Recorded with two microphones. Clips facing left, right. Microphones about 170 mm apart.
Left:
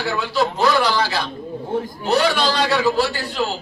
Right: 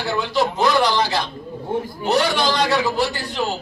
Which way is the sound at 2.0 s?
15° right (ahead or behind).